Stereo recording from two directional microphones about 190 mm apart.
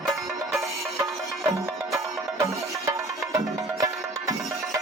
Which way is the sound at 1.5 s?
15° right (ahead or behind).